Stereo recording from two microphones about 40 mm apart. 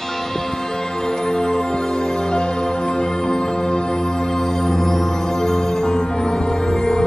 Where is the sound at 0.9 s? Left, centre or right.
Centre.